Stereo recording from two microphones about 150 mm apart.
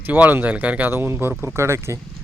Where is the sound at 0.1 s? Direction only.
10° right (ahead or behind).